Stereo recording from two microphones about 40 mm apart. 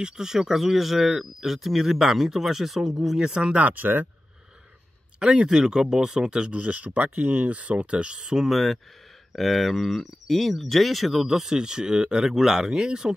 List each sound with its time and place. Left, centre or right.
0.0 s speech: centre
3.5 s speech: right
5.2 s speech: right
6.5 s speech: right; by 8.5 s centre
8.5 s speech: centre
11.2 s speech: centre
12.3 s speech: centre